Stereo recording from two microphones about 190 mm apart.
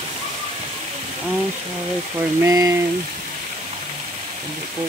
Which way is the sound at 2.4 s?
15° right (ahead or behind).